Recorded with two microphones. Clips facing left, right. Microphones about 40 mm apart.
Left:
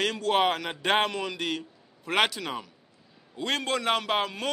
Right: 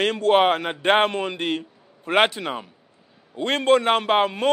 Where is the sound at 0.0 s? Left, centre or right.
Right.